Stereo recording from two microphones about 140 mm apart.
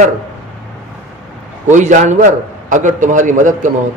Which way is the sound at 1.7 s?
60° right (ahead or behind).